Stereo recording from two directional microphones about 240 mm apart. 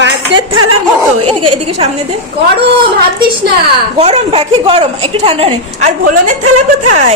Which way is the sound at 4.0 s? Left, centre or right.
Right.